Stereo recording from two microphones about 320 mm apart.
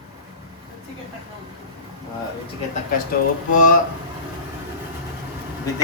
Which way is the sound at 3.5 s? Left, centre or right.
Left.